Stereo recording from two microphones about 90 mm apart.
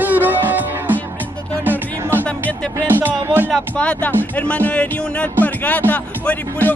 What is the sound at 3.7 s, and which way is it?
Speech, 15° left (ahead or behind).